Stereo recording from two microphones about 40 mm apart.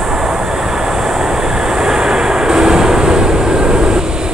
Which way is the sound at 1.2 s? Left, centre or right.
Centre.